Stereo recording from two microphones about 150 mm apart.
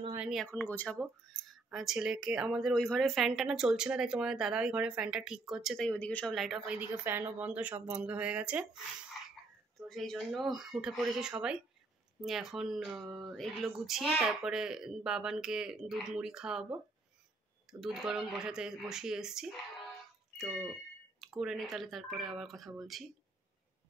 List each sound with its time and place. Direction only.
0.1 s a sound: 5° right (ahead or behind)
0.5 s speech: 10° left (ahead or behind)
1.5 s a woman's voice: centre (ahead or behind)
9.8 s a woman's voice: centre (ahead or behind)